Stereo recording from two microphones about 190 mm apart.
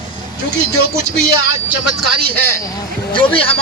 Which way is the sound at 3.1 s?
30° left (ahead or behind).